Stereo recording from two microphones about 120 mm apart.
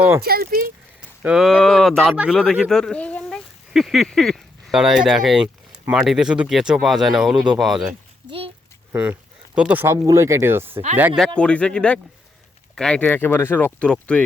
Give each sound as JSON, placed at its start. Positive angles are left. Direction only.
{"t": 1.2, "sound": "speech", "side_deg": -5}
{"t": 2.1, "sound": "speech", "side_deg": -10}
{"t": 2.4, "sound": "speech", "side_deg": 5}
{"t": 8.3, "sound": "a child's voice", "side_deg": -50}
{"t": 9.6, "sound": "speech", "side_deg": -15}
{"t": 11.3, "sound": "speech", "side_deg": 10}
{"t": 13.1, "sound": "speech", "side_deg": 15}